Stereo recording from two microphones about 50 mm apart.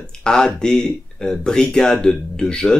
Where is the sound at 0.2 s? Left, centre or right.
Centre.